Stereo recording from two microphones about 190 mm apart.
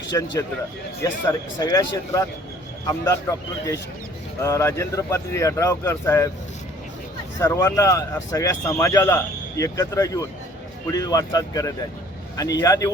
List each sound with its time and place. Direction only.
0.1 s speech: 20° left (ahead or behind)
7.3 s speech: 15° left (ahead or behind)